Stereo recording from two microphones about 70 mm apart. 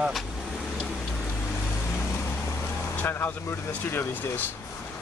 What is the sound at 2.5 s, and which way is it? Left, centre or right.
Vehicle, left.